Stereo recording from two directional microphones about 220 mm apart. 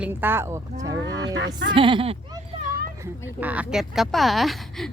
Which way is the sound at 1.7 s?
25° right (ahead or behind).